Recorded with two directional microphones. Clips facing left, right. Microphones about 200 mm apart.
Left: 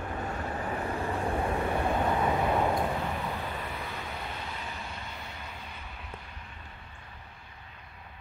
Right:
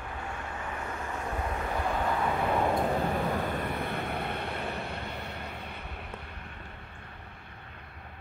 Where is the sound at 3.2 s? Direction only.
50° right (ahead or behind).